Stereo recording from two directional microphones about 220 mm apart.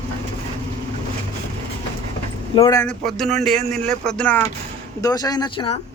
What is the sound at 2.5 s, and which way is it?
Speech, 15° left (ahead or behind).